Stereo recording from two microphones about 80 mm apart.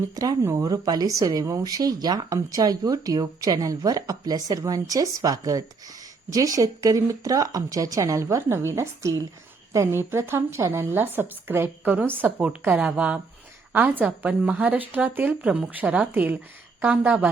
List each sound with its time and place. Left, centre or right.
0.4 s a woman's voice: right; by 17.2 s centre